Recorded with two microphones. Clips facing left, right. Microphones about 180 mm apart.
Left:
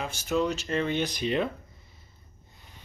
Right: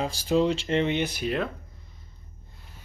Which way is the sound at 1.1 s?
5° right (ahead or behind).